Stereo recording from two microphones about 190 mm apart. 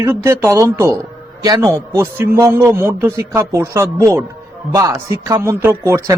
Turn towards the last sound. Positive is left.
turn(degrees=-15)  # may be behind; listen again after turning